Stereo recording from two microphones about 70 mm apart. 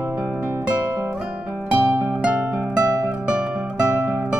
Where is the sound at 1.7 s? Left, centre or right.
Right.